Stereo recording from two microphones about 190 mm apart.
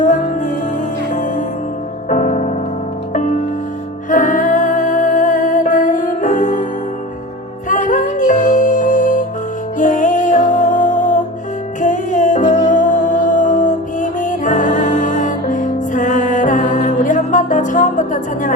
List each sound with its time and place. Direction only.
0.0 s music: 40° left (ahead or behind)
7.7 s music: 40° left (ahead or behind)